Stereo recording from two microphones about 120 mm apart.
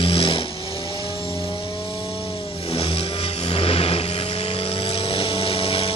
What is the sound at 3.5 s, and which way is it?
Vehicle, 50° left (ahead or behind).